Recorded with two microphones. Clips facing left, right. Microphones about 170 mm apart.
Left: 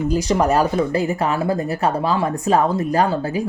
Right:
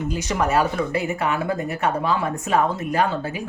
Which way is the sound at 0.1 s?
35° left (ahead or behind).